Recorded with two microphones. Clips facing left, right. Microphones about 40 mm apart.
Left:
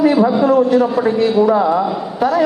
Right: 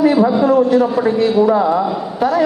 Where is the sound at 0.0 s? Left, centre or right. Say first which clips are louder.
Even; centre.